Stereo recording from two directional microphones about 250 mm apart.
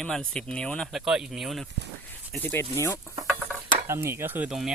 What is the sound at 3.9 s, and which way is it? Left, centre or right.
Speech, centre.